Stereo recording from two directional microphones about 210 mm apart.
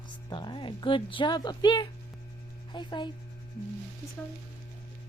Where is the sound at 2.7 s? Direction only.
20° left (ahead or behind).